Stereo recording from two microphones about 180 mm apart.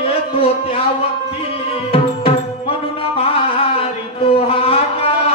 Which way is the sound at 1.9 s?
30° left (ahead or behind).